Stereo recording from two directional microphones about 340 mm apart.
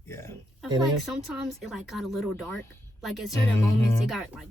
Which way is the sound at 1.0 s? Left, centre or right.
Centre.